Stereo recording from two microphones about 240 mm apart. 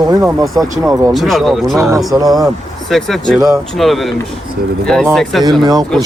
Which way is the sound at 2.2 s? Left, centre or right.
Centre.